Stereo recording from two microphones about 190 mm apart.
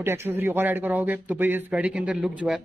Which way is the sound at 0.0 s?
15° right (ahead or behind).